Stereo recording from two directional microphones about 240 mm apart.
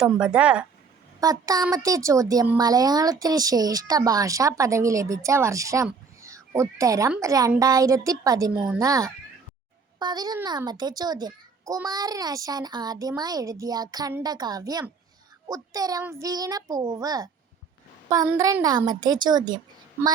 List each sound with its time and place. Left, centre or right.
0.0 s speech: centre
1.2 s speech: centre